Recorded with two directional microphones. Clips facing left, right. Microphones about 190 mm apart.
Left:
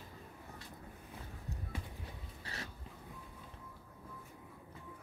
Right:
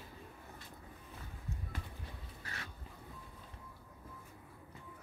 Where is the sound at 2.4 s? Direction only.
30° left (ahead or behind).